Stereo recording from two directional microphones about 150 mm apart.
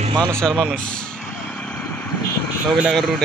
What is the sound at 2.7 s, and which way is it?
Speech, centre (ahead or behind).